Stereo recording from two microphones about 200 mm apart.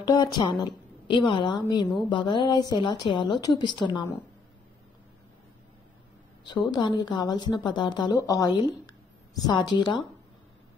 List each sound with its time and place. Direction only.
0.0 s a woman's voice: 20° left (ahead or behind)
6.4 s a woman's voice: 20° left (ahead or behind)